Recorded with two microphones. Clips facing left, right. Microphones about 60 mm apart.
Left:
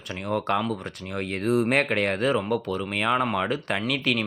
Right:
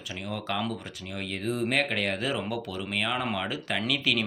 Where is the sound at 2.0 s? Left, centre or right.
Left.